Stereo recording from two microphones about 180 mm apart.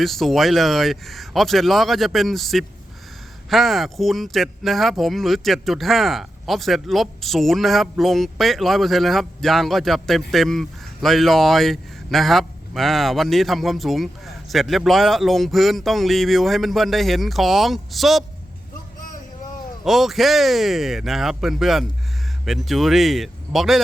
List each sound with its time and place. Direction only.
0.0 s speech: centre (ahead or behind)
19.8 s speech: centre (ahead or behind)